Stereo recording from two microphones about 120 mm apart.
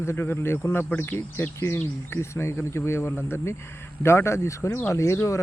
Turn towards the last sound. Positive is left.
turn(degrees=25)  # may be behind; listen again after turning